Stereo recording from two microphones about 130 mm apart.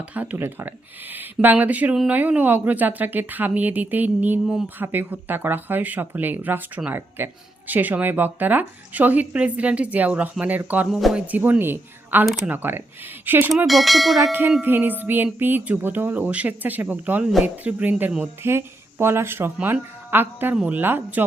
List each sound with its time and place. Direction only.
0.0 s speech: 10° right (ahead or behind)
13.7 s bell: centre (ahead or behind)
14.6 s speech: 15° right (ahead or behind)